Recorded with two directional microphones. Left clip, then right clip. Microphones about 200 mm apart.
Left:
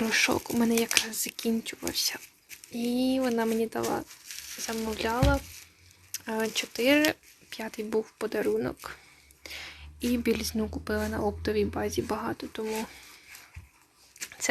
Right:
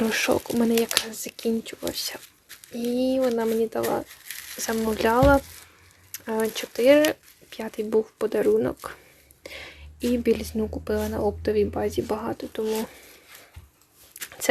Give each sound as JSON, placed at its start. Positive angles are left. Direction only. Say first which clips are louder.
{"t": 0.0, "sound": "speech", "louder": "right 3 dB", "side_deg": -10}
{"t": 4.5, "sound": "speech", "louder": "right 7 dB", "side_deg": -20}